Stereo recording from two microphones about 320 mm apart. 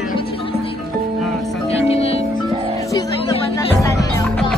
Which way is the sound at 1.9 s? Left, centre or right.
Centre.